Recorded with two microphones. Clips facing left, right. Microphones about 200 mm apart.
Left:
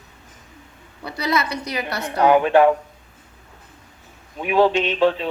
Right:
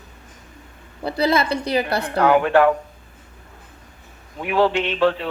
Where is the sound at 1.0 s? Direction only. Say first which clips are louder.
Right 4 dB; 30° right (ahead or behind).